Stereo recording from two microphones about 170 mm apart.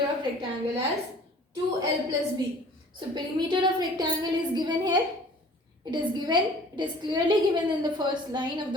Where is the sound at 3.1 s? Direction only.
25° right (ahead or behind).